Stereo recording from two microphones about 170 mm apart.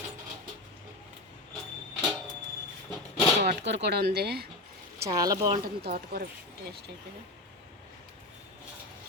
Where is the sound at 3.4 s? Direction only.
90° right; by 4.5 s 70° right (ahead or behind).